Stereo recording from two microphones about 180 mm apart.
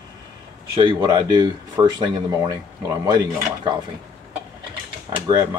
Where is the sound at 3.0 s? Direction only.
20° right (ahead or behind).